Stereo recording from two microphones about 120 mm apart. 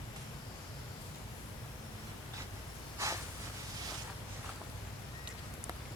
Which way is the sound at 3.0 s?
25° right (ahead or behind).